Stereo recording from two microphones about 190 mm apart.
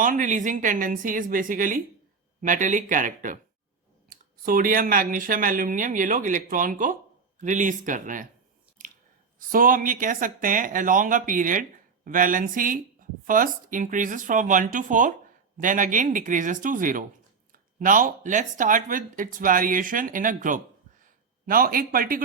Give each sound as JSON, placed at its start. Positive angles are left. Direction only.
{"t": 0.0, "sound": "speech", "side_deg": -45}
{"t": 9.5, "sound": "speech", "side_deg": -45}